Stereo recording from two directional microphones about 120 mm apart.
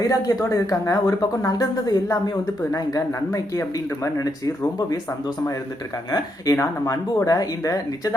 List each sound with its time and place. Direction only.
0.1 s speech: 30° left (ahead or behind)
6.1 s speech: 30° left (ahead or behind)